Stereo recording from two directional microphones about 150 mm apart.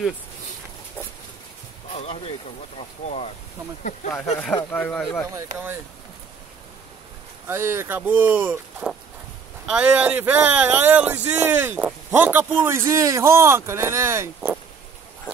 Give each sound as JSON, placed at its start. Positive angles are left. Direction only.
{"t": 2.0, "sound": "speech", "side_deg": 40}
{"t": 4.7, "sound": "speech", "side_deg": 10}
{"t": 5.3, "sound": "speech", "side_deg": -15}
{"t": 7.4, "sound": "speech", "side_deg": -15}